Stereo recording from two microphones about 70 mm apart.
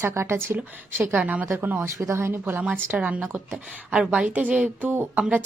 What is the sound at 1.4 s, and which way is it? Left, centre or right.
Speech, right.